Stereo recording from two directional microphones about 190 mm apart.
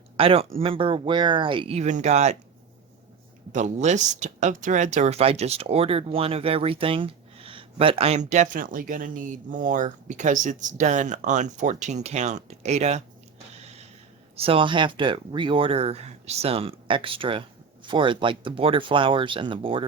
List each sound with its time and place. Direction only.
0.2 s speech: 30° right (ahead or behind)
3.5 s speech: 40° right (ahead or behind)
14.3 s speech: 30° right (ahead or behind)